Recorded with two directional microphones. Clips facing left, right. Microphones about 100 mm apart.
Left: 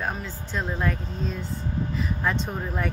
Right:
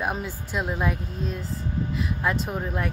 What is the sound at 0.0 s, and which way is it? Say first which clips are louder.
Speech: right 2 dB; 15° right (ahead or behind).